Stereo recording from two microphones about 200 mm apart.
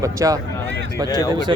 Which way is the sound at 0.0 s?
15° right (ahead or behind).